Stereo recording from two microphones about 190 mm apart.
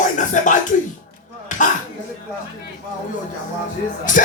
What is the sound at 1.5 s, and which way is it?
Throat clearing, 40° left (ahead or behind).